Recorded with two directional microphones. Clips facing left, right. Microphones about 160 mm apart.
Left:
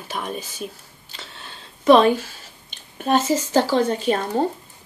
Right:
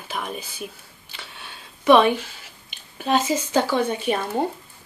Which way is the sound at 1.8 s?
40° left (ahead or behind).